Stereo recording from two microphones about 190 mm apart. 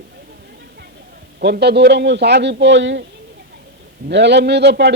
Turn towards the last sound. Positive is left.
turn(degrees=-65)  # may be behind; listen again after turning